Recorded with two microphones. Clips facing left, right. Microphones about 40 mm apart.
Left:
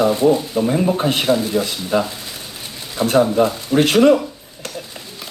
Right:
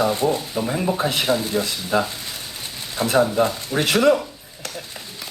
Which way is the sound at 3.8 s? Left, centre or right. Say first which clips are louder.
Left 5 dB; left.